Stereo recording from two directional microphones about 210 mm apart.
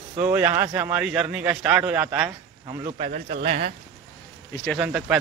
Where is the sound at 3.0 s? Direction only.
35° right (ahead or behind).